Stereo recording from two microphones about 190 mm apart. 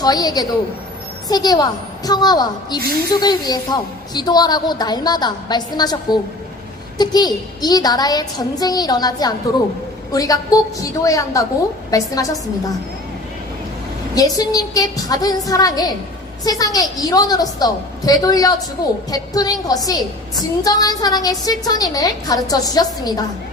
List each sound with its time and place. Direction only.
0.0 s a woman's voice: 20° left (ahead or behind)
14.2 s a woman's voice: 20° left (ahead or behind)